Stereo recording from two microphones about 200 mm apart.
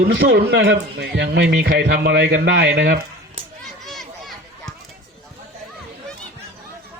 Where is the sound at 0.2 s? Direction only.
55° right (ahead or behind).